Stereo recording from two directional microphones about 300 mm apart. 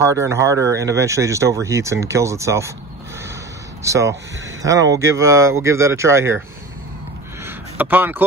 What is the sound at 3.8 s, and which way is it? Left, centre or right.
Speech, centre.